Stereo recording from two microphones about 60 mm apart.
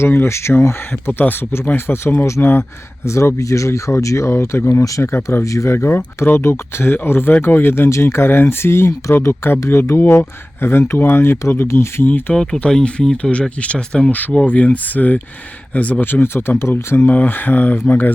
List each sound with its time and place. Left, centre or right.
0.0 s speech: left
4.8 s speech: left
5.7 s speech: left
12.0 s speech: left
14.1 s speech: left